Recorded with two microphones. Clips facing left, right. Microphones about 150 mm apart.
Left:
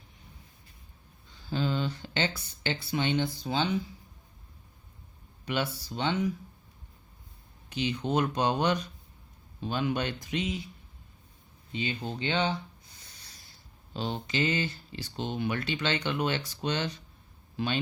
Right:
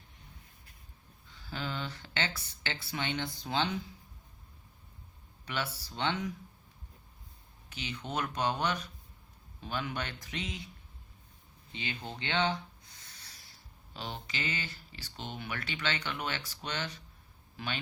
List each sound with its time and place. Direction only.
1.5 s speech: 20° left (ahead or behind)
5.5 s speech: 20° left (ahead or behind)
7.7 s speech: 25° left (ahead or behind)
11.8 s speech: 15° left (ahead or behind)
13.9 s speech: 25° left (ahead or behind)